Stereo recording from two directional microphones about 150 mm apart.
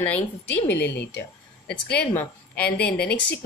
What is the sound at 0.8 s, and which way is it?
Speech, 90° left.